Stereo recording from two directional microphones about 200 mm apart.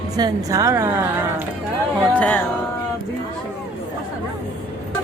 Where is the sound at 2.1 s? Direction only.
5° left (ahead or behind).